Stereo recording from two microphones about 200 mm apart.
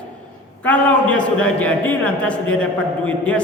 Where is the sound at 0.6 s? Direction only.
5° left (ahead or behind).